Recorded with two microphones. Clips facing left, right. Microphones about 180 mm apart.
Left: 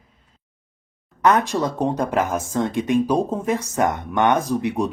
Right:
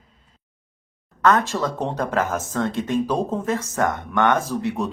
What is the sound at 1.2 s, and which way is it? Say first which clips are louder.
Speech: left 1 dB; 15° left (ahead or behind).